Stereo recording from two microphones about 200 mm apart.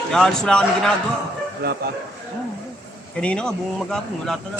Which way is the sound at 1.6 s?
55° right (ahead or behind).